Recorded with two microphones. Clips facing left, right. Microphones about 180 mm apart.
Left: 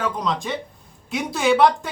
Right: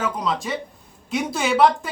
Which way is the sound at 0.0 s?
Centre (ahead or behind).